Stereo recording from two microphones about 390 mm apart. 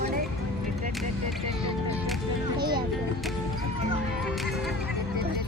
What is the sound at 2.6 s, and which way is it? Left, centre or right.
Music, centre.